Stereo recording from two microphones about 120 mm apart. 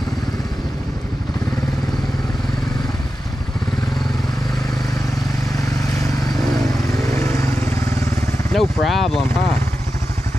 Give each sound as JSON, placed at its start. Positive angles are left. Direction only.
{"t": 7.1, "sound": "vehicle", "side_deg": 25}
{"t": 8.5, "sound": "speech", "side_deg": 0}